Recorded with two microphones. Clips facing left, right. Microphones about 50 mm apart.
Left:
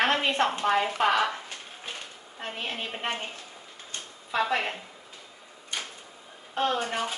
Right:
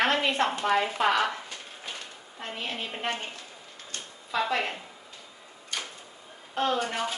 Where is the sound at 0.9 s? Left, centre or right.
Left.